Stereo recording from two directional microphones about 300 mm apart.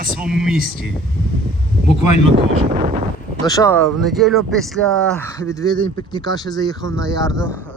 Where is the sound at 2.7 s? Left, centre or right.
Right.